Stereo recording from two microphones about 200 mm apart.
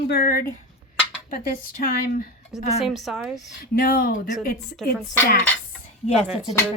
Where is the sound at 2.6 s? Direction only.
35° left (ahead or behind).